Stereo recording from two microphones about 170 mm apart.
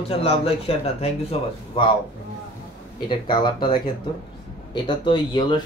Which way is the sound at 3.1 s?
30° left (ahead or behind).